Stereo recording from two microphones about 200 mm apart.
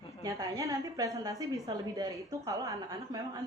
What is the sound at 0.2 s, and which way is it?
A woman's voice, 20° right (ahead or behind).